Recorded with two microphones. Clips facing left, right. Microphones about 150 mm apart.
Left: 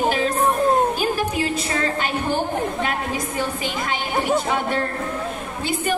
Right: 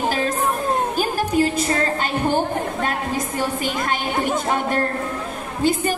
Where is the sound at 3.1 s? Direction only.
45° right (ahead or behind).